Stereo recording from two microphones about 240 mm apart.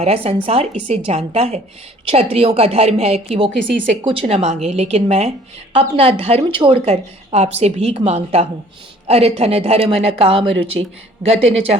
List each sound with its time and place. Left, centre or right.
0.0 s a woman's voice: right